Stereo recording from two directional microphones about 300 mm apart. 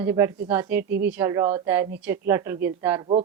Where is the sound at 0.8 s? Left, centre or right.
Right.